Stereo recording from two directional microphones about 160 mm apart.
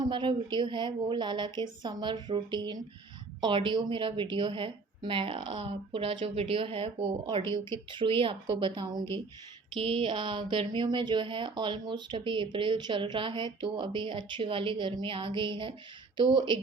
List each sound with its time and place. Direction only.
0.0 s a woman's voice: 30° right (ahead or behind)